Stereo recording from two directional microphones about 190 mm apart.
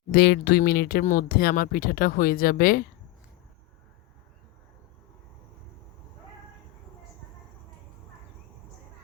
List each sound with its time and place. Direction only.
0.1 s speech: 55° left (ahead or behind)